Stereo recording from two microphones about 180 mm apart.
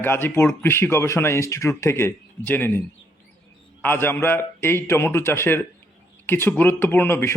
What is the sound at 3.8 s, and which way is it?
A man's voice, 10° left (ahead or behind).